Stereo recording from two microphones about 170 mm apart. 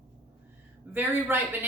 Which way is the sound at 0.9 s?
10° right (ahead or behind).